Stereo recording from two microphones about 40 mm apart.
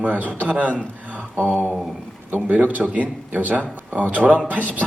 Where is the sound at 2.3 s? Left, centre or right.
Right.